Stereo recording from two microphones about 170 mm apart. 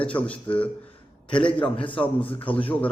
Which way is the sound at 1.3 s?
30° left (ahead or behind).